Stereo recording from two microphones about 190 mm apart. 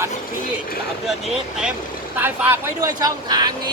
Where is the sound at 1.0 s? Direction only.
5° right (ahead or behind).